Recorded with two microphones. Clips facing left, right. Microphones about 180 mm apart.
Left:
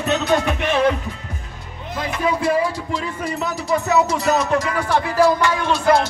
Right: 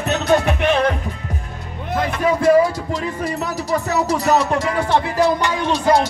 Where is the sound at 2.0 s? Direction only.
45° right (ahead or behind).